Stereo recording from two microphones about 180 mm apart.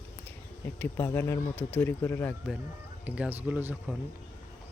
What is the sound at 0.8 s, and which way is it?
Speech, 10° left (ahead or behind).